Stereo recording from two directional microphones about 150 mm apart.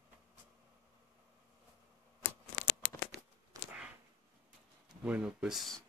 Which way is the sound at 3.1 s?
90° right.